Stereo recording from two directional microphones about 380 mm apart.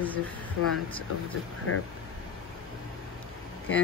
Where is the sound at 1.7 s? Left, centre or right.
Left.